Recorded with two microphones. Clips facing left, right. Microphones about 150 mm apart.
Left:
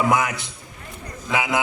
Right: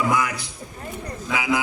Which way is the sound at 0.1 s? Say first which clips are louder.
Left 2 dB; 25° left (ahead or behind).